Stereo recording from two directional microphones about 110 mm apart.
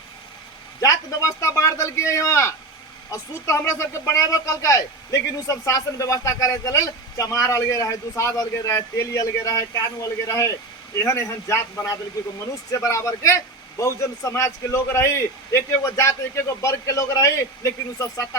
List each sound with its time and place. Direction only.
0.8 s speech: 30° left (ahead or behind)